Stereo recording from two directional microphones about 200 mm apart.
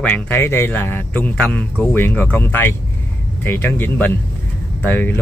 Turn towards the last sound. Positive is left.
turn(degrees=10)  # may be behind; listen again after turning